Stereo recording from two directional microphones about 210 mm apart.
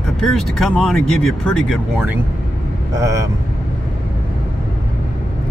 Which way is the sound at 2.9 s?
15° right (ahead or behind).